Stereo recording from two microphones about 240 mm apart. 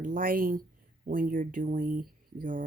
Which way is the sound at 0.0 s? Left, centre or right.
Right.